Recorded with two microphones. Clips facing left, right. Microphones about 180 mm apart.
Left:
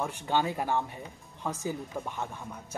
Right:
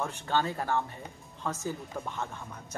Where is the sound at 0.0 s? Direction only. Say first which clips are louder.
Left 1 dB; 15° left (ahead or behind).